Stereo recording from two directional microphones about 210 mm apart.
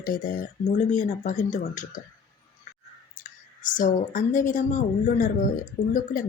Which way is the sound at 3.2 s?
40° left (ahead or behind).